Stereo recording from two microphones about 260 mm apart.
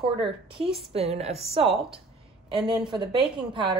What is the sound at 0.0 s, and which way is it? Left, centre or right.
Speech, centre.